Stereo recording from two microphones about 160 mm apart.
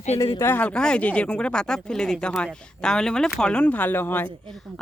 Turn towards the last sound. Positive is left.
turn(degrees=10)  # may be behind; listen again after turning